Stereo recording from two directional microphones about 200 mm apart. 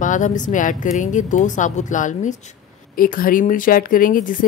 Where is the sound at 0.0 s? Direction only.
40° left (ahead or behind).